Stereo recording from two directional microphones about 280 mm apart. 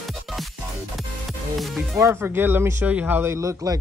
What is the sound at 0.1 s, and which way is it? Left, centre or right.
Music, centre.